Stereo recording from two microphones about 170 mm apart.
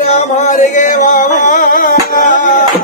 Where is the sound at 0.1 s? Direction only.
45° left (ahead or behind).